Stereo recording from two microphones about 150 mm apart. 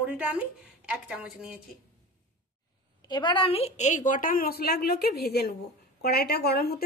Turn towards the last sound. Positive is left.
turn(degrees=90)